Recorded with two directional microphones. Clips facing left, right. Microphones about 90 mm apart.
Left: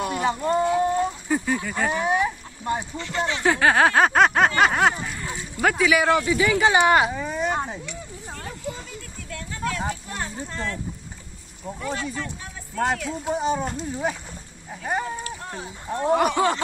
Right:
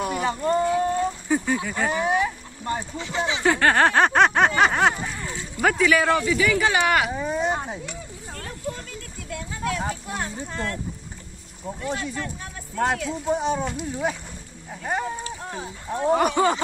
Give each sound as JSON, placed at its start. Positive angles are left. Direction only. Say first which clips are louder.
{"t": 0.2, "sound": "speech", "louder": "left 1 dB", "side_deg": 20}
{"t": 0.7, "sound": "a sound", "louder": "left 1 dB", "side_deg": 20}
{"t": 1.3, "sound": "speech", "louder": "right 2 dB", "side_deg": 0}
{"t": 3.0, "sound": "snicker", "louder": "even", "side_deg": -10}
{"t": 5.6, "sound": "speech", "louder": "even", "side_deg": 0}
{"t": 6.6, "sound": "speech", "louder": "left 3 dB", "side_deg": 25}
{"t": 7.1, "sound": "speech", "louder": "right 1 dB", "side_deg": -20}
{"t": 8.3, "sound": "a sound", "louder": "left 1 dB", "side_deg": 5}
{"t": 9.3, "sound": "speech", "louder": "right 1 dB", "side_deg": -5}
{"t": 11.6, "sound": "snicker", "louder": "even", "side_deg": 0}
{"t": 13.7, "sound": "speech", "louder": "even", "side_deg": -5}
{"t": 14.7, "sound": "snicker", "louder": "even", "side_deg": 0}